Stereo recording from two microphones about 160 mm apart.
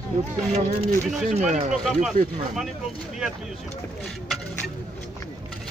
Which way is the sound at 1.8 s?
Centre (ahead or behind).